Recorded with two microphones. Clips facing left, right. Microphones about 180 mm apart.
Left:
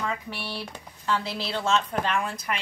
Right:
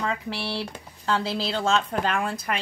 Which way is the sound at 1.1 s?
35° right (ahead or behind).